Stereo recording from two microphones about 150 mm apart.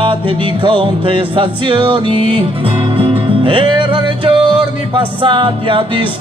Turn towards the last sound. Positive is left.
turn(degrees=-35)  # may be behind; listen again after turning